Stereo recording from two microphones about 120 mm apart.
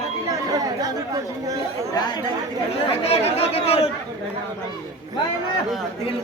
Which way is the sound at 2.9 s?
55° left (ahead or behind).